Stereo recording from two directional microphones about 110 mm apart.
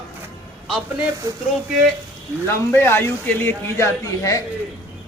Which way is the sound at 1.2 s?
25° right (ahead or behind).